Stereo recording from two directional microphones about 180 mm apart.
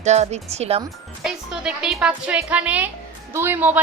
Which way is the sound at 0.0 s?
40° right (ahead or behind).